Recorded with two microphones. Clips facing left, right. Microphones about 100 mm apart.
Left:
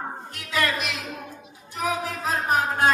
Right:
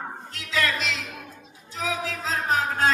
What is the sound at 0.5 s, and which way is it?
Music, 15° left (ahead or behind).